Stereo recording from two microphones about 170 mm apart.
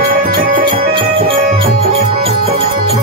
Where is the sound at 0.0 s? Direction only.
60° right (ahead or behind).